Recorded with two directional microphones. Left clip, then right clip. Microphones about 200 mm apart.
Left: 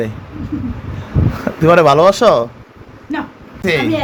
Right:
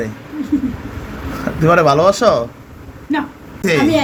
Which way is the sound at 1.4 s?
30° left (ahead or behind).